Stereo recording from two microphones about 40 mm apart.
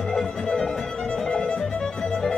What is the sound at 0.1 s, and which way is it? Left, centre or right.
Music, centre.